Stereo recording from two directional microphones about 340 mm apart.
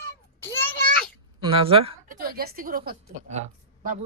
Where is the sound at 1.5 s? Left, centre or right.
Centre.